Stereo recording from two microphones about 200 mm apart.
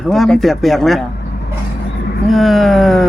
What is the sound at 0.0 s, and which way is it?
A man's voice, centre (ahead or behind).